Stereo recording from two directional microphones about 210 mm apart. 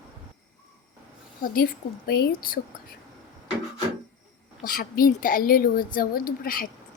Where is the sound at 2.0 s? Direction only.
45° left (ahead or behind).